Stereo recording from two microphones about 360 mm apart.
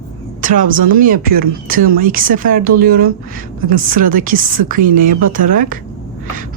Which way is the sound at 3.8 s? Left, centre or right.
Right.